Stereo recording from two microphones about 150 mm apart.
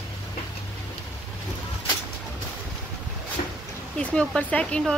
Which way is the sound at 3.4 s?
50° left (ahead or behind).